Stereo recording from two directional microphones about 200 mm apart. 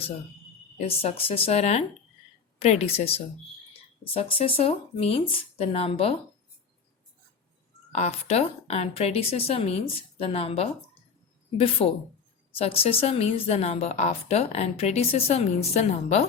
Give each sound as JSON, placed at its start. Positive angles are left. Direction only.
{"t": 0.8, "sound": "a woman's voice", "side_deg": 30}
{"t": 7.9, "sound": "a woman's voice", "side_deg": 35}